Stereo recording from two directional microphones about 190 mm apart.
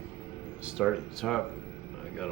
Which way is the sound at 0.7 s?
5° right (ahead or behind).